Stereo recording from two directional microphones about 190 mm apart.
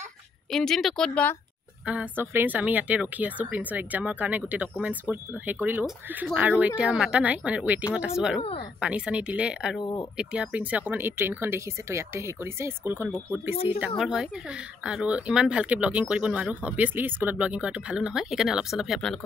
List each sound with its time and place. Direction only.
0.5 s speech: centre (ahead or behind)
1.9 s speech: 10° right (ahead or behind)
8.4 s speech: 30° left (ahead or behind)
8.7 s speech: 5° right (ahead or behind)
9.8 s speech: 20° left (ahead or behind)
10.1 s speech: 5° right (ahead or behind)